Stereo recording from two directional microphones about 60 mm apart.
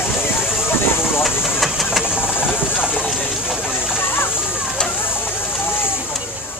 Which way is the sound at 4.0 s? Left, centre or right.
Left.